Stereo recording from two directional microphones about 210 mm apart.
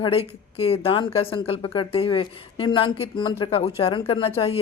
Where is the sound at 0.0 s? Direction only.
25° left (ahead or behind).